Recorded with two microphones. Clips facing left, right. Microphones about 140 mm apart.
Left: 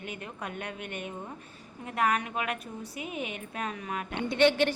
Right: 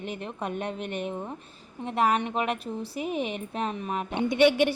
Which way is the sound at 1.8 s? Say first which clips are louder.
Right 4 dB; 30° right (ahead or behind).